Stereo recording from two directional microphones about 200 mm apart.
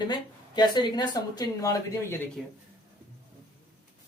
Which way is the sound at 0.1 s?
20° left (ahead or behind).